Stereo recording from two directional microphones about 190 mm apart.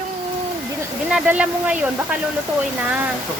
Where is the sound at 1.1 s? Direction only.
5° right (ahead or behind).